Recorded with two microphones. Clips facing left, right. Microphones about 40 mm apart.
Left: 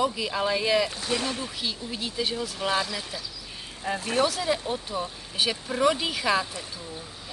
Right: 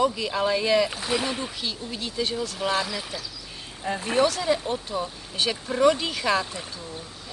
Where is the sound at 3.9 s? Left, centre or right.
Right.